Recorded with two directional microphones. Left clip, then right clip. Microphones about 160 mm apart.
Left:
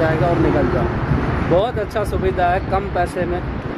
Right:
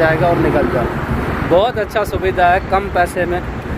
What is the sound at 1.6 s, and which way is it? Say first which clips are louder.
Speech: right 4 dB; 10° left (ahead or behind).